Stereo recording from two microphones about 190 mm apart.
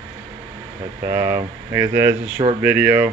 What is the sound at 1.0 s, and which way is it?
Speech, 15° right (ahead or behind).